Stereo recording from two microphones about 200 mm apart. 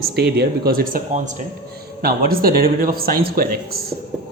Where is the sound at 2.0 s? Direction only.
50° right (ahead or behind).